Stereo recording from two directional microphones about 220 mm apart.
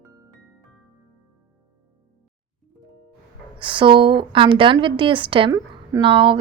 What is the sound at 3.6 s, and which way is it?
A woman's voice, 20° right (ahead or behind).